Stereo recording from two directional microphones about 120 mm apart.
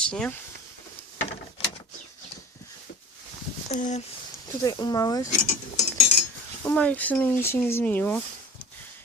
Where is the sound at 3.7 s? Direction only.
85° left.